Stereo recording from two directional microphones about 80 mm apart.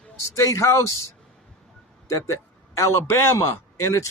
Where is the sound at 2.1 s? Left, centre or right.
Left.